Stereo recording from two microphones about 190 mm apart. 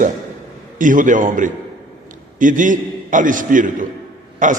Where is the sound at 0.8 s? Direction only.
45° right (ahead or behind).